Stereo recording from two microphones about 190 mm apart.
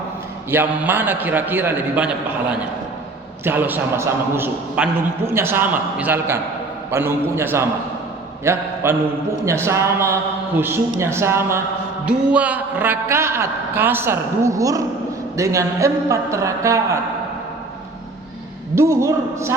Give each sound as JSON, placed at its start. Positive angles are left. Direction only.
{"t": 0.5, "sound": "a man's voice", "side_deg": -10}
{"t": 18.7, "sound": "a man's voice", "side_deg": -15}